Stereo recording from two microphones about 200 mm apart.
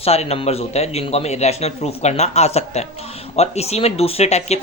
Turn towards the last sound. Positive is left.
turn(degrees=35)  # may be behind; listen again after turning